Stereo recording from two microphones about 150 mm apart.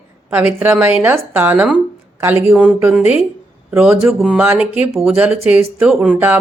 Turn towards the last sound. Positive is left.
turn(degrees=-5)  # may be behind; listen again after turning